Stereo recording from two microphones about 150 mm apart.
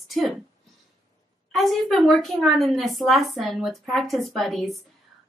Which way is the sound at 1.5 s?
Centre (ahead or behind).